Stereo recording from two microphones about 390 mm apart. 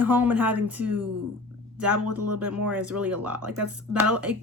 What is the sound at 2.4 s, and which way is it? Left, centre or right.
Speech, centre.